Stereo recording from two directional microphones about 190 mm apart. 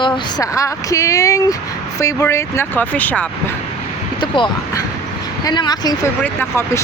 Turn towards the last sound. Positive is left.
turn(degrees=10)  # may be behind; listen again after turning